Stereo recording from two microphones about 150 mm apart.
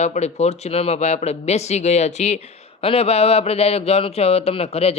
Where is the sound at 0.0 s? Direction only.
50° left (ahead or behind).